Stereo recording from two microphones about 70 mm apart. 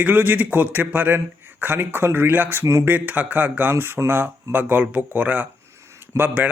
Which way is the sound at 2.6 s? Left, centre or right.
Right.